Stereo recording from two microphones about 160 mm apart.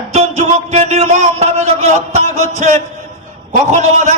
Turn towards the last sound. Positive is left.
turn(degrees=-50)  # may be behind; listen again after turning